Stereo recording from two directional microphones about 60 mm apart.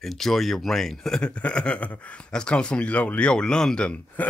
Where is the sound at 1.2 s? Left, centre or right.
Centre.